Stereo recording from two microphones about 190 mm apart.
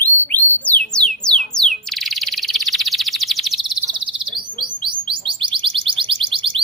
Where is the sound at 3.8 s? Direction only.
25° right (ahead or behind).